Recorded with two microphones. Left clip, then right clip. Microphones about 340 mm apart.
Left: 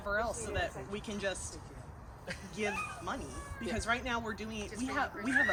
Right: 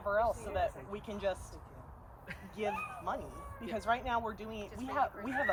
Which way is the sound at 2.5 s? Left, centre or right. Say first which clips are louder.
Even; centre.